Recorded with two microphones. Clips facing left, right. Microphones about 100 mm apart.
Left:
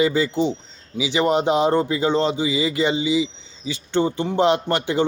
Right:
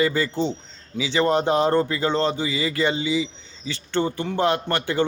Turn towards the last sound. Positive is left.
turn(degrees=20)  # may be behind; listen again after turning